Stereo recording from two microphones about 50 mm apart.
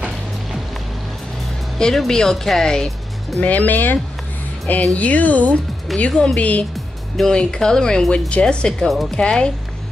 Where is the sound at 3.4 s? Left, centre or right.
Left.